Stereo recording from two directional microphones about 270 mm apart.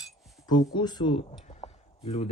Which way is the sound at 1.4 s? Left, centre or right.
Left.